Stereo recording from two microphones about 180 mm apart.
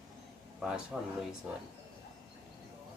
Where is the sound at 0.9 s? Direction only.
5° right (ahead or behind).